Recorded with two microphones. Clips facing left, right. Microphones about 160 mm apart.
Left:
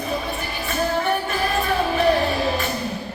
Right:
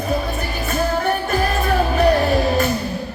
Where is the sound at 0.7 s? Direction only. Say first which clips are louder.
Right 2 dB; 45° right (ahead or behind).